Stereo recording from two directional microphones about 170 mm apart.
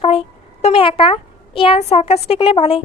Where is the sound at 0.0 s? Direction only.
35° left (ahead or behind).